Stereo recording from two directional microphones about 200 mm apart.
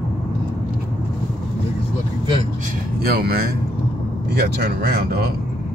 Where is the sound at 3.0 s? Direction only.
50° right (ahead or behind).